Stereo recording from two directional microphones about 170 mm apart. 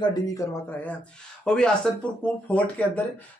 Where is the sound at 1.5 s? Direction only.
5° left (ahead or behind).